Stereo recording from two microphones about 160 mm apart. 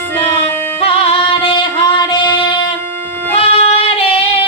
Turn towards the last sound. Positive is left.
turn(degrees=35)  # may be behind; listen again after turning